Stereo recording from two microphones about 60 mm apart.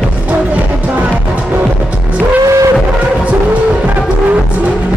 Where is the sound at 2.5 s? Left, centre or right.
Right.